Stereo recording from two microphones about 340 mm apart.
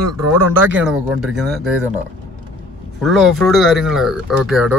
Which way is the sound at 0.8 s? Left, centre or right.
Centre.